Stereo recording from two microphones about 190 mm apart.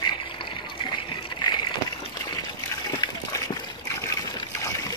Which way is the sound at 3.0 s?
20° left (ahead or behind).